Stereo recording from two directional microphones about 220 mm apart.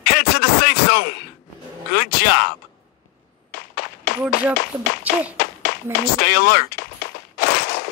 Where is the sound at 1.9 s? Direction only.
45° left (ahead or behind).